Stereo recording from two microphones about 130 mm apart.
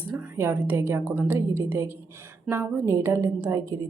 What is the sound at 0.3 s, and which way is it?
A woman's voice, 20° right (ahead or behind).